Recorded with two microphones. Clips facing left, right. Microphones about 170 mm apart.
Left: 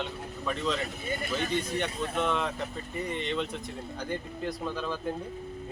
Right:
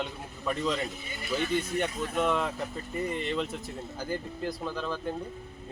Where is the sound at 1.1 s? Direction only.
50° left (ahead or behind).